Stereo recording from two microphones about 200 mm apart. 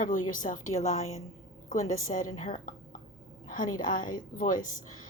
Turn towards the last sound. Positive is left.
turn(degrees=40)  # may be behind; listen again after turning